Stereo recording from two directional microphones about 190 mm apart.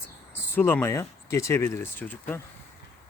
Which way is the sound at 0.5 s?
10° left (ahead or behind).